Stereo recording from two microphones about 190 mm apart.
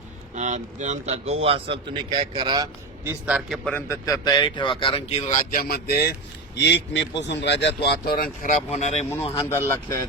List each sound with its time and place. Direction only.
0.3 s a man's voice: 40° right (ahead or behind); by 2.6 s 25° right (ahead or behind)
3.0 s a man's voice: 10° right (ahead or behind); by 6.1 s 55° left (ahead or behind)
6.6 s speech: 65° left (ahead or behind)
8.7 s speech: 35° left (ahead or behind)
9.3 s speech: 15° left (ahead or behind)